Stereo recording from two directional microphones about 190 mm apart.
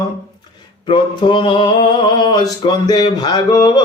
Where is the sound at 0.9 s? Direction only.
25° left (ahead or behind).